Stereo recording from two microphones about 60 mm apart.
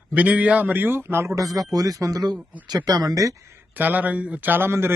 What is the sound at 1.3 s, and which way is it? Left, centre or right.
Speech, right.